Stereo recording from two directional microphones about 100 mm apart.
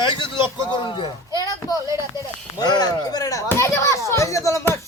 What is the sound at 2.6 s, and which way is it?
Speech, 45° left (ahead or behind).